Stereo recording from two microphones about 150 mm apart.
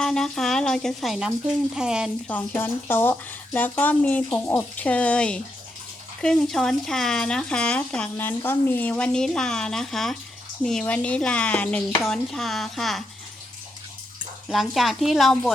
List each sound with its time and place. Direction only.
0.0 s speech: 5° left (ahead or behind)
2.2 s speech: 10° left (ahead or behind)
14.5 s speech: centre (ahead or behind)